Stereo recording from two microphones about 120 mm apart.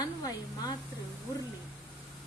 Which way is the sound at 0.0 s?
30° left (ahead or behind).